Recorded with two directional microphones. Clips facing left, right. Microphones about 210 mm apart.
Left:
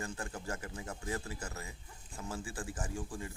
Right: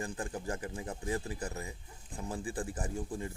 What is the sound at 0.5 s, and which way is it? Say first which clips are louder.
Speech: right 3 dB; 30° right (ahead or behind).